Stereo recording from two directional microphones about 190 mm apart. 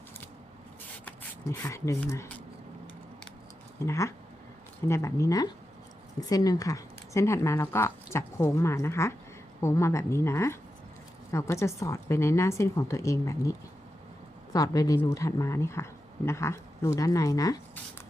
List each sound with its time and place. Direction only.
1.0 s speech: 10° left (ahead or behind)
3.8 s a woman's voice: 15° left (ahead or behind)